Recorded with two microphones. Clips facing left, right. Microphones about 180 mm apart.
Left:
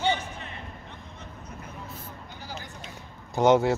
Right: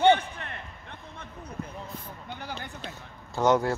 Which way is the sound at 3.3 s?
20° left (ahead or behind).